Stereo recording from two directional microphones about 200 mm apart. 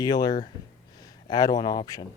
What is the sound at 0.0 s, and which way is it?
Speech, 20° left (ahead or behind).